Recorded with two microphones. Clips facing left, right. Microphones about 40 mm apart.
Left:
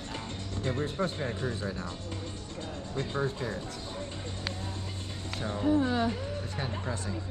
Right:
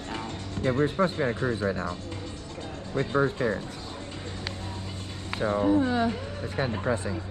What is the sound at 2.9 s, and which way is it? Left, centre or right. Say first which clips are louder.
Speech: right 7 dB; right.